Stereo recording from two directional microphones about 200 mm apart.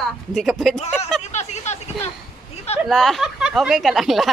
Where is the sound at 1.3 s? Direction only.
35° left (ahead or behind).